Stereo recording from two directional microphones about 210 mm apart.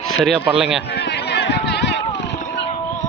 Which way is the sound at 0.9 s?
55° left (ahead or behind).